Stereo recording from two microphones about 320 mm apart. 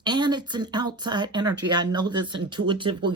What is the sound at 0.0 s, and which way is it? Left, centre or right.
Speech, centre.